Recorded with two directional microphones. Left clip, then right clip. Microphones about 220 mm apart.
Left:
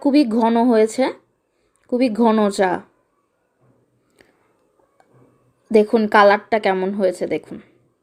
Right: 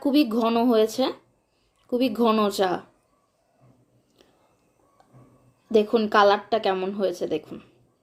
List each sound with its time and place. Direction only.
0.0 s a woman's voice: 30° left (ahead or behind)
1.9 s a woman's voice: 30° left (ahead or behind)
5.7 s a woman's voice: 30° left (ahead or behind)